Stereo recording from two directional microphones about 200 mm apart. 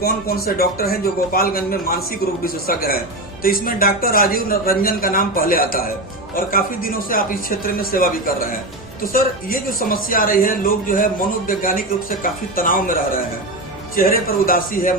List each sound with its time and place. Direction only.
0.0 s speech: 50° left (ahead or behind)